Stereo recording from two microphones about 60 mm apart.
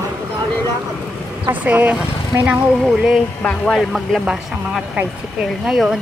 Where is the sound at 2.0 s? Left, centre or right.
Centre.